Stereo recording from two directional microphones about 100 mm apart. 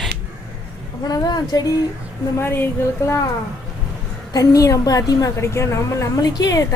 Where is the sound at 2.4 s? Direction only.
25° left (ahead or behind).